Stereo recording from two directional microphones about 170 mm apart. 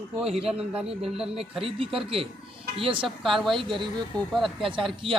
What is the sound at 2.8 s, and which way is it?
Speech, 30° right (ahead or behind).